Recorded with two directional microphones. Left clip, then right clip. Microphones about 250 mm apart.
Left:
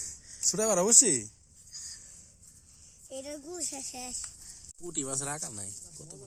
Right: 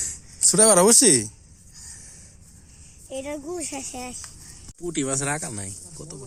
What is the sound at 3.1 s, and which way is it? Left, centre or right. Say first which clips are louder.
Speech: right 9 dB; left.